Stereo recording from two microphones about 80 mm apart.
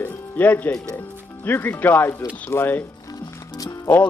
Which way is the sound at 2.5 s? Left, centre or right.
Left.